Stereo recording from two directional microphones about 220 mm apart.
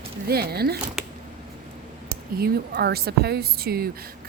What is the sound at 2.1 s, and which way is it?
Speech, 45° right (ahead or behind).